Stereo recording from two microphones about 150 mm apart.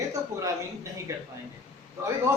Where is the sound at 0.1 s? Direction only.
20° right (ahead or behind).